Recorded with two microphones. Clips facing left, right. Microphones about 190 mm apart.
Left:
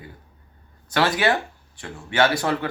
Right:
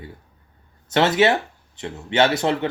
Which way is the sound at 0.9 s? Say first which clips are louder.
Right 4 dB; 25° right (ahead or behind).